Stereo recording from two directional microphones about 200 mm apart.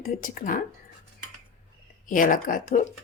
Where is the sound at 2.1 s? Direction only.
45° left (ahead or behind).